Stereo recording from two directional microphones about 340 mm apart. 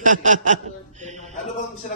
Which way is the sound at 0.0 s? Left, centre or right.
Right.